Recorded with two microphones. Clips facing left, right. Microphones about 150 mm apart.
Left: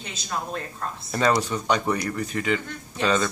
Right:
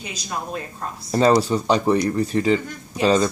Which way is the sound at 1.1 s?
30° right (ahead or behind).